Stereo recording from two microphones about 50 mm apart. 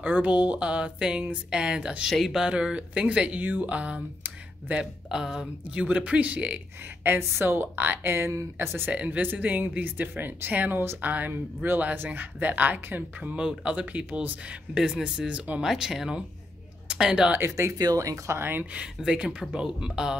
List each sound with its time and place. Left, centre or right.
0.0 s speech: right
2.0 s speech: centre
2.5 s speech: right
3.3 s speech: right
5.1 s speech: centre
5.9 s speech: right
7.2 s a woman's voice: right
8.9 s speech: right
13.4 s speech: centre
15.6 s speech: centre
16.8 s a sound: centre
17.5 s speech: right
18.4 s a woman's voice: right
19.5 s speech: centre